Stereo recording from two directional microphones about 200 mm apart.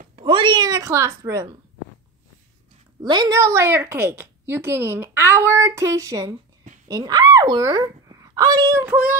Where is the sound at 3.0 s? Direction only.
20° right (ahead or behind).